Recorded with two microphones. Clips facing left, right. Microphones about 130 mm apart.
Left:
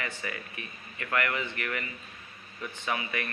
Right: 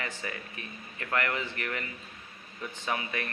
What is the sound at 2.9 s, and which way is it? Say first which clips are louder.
Speech: even; 30° right (ahead or behind).